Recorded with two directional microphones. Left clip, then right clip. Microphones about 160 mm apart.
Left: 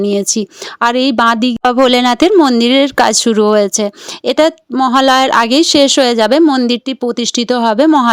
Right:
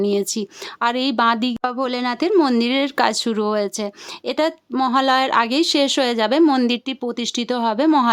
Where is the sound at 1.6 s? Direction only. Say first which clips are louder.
Left 12 dB; 50° left (ahead or behind).